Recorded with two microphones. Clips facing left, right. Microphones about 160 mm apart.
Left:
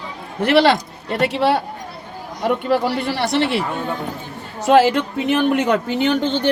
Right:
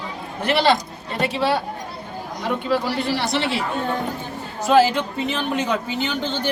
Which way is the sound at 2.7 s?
60° left (ahead or behind).